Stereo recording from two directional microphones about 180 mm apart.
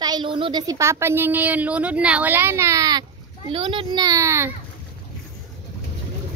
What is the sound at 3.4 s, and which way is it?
A child's voice, 30° right (ahead or behind).